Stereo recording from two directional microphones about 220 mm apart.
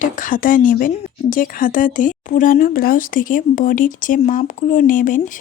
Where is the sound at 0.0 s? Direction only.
35° left (ahead or behind).